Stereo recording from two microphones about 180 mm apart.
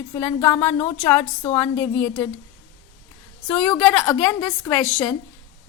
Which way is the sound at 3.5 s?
5° left (ahead or behind).